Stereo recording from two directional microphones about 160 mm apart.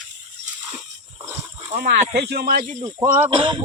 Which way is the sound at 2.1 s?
80° right.